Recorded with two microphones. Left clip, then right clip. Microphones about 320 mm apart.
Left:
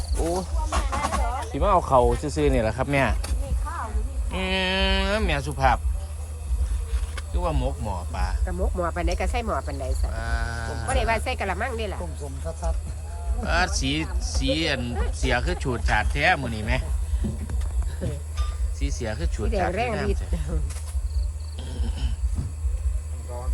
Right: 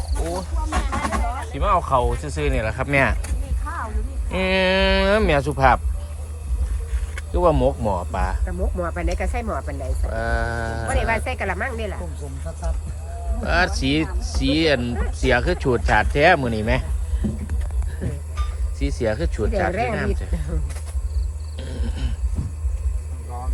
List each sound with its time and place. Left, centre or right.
0.2 s vehicle: centre
4.3 s speech: centre
7.3 s speech: centre
18.8 s speech: centre
21.6 s a sound: centre